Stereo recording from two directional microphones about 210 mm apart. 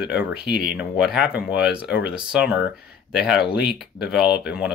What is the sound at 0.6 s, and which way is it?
Speech, 5° right (ahead or behind).